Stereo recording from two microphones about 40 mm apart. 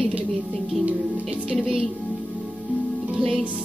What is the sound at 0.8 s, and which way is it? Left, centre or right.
Music, right.